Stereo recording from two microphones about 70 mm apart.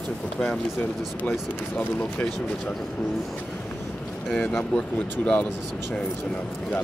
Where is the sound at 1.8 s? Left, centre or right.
Centre.